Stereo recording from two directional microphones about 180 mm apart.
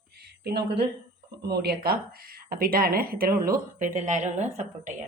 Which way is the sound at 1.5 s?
60° right (ahead or behind).